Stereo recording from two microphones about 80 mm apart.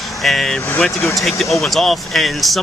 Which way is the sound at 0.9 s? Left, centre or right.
Left.